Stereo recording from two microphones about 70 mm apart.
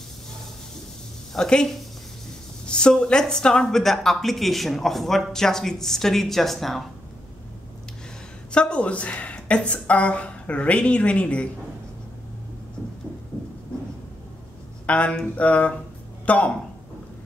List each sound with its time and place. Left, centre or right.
1.3 s a woman's voice: centre
8.5 s a woman's voice: centre
14.9 s a sound: centre
16.3 s speech: left